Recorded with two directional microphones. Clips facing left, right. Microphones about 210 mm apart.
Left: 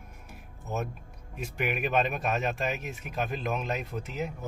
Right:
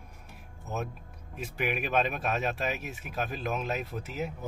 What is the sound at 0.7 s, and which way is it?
Speech, centre (ahead or behind).